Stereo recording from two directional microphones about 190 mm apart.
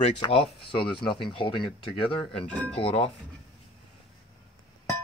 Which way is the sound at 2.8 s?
30° left (ahead or behind).